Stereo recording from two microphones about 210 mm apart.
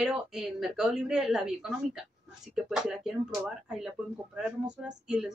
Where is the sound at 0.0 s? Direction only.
5° right (ahead or behind).